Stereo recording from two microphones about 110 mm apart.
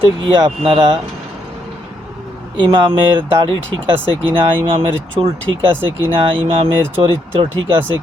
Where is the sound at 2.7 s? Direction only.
50° right (ahead or behind).